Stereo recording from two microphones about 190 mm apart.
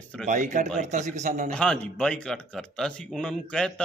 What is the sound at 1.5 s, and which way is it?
A man's voice, 5° left (ahead or behind).